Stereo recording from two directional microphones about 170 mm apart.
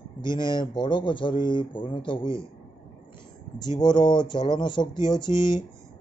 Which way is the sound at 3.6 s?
25° left (ahead or behind).